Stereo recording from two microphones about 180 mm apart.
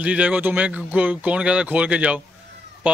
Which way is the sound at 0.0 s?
5° right (ahead or behind).